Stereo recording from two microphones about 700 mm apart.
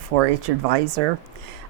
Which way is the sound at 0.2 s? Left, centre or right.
Right.